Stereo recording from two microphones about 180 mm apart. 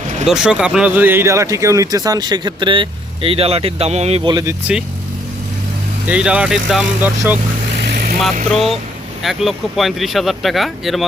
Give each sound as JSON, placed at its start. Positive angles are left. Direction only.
{"t": 0.3, "sound": "speech", "side_deg": -5}
{"t": 6.1, "sound": "speech", "side_deg": -5}
{"t": 8.4, "sound": "speech", "side_deg": 0}